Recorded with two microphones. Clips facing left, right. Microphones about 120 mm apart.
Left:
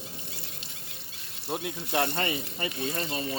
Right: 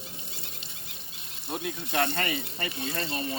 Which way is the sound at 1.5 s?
20° left (ahead or behind).